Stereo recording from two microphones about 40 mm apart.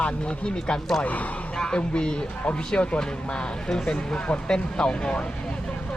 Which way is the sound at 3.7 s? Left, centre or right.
Centre.